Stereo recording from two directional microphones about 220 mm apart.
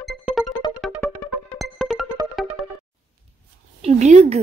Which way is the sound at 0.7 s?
5° right (ahead or behind).